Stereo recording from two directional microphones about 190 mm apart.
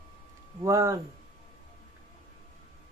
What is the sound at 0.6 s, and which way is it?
Speech, 15° right (ahead or behind).